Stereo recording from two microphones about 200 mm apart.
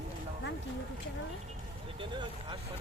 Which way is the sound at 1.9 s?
25° right (ahead or behind).